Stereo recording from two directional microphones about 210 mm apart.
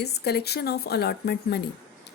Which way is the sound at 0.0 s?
50° left (ahead or behind).